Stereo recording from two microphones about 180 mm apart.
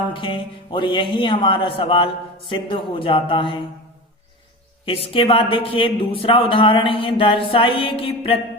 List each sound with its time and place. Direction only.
0.1 s a man's voice: 30° left (ahead or behind)
4.9 s a man's voice: 30° left (ahead or behind)